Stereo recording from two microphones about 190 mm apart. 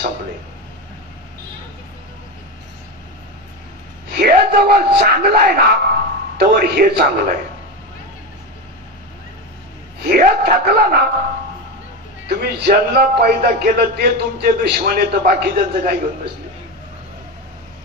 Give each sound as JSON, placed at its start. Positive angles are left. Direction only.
{"t": 4.1, "sound": "speech", "side_deg": -55}
{"t": 10.0, "sound": "speech", "side_deg": -50}
{"t": 12.3, "sound": "a man's voice", "side_deg": -60}